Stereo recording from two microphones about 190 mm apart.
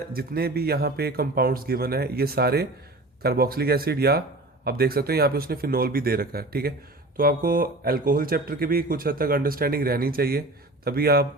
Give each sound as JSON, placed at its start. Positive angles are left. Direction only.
{"t": 0.1, "sound": "speech", "side_deg": -55}